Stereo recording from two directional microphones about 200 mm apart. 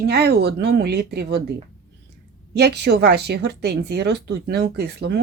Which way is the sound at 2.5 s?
55° right (ahead or behind).